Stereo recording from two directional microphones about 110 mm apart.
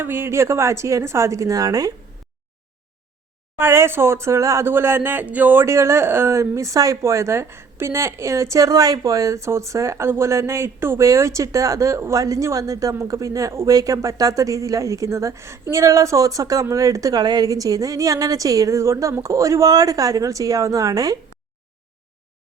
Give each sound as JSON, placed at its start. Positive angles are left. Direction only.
{"t": 0.0, "sound": "speech", "side_deg": -20}
{"t": 3.6, "sound": "a woman's voice", "side_deg": -20}